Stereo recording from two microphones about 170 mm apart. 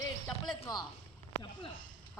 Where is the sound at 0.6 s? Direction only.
25° left (ahead or behind).